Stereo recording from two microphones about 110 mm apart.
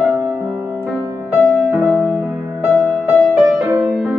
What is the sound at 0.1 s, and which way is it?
Music, 25° right (ahead or behind).